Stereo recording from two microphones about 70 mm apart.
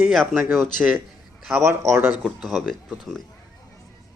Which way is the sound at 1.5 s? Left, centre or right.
Right.